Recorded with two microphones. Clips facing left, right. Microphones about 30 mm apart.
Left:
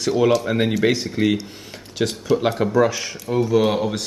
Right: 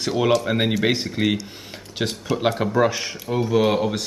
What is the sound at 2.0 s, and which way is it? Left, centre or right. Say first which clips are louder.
A man's voice: left 3 dB; centre.